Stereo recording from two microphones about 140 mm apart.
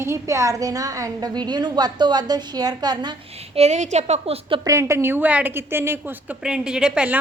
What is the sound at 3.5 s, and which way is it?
A woman's voice, 50° right (ahead or behind).